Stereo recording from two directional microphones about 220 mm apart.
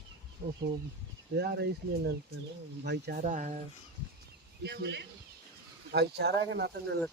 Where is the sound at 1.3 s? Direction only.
45° right (ahead or behind).